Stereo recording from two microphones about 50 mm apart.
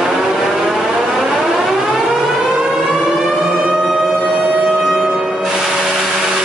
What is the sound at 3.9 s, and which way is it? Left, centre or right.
Music, centre.